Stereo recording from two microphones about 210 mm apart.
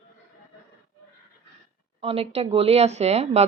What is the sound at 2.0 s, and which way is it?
A woman's voice, 25° right (ahead or behind).